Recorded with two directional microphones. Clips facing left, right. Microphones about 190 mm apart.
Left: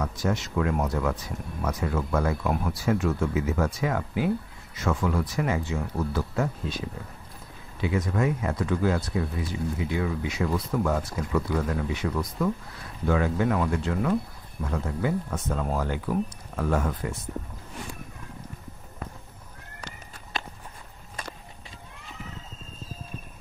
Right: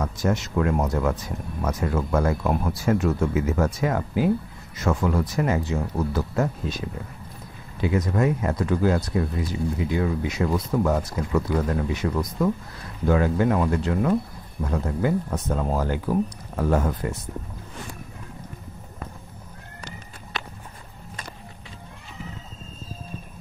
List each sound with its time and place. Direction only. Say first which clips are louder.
0.0 s speech: right 3 dB; 45° right (ahead or behind)
7.8 s speech: right 3 dB; 40° right (ahead or behind)